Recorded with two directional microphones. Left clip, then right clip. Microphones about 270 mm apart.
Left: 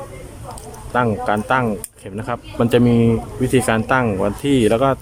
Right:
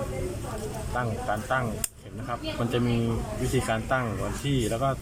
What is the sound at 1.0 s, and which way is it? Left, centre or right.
Speech, left.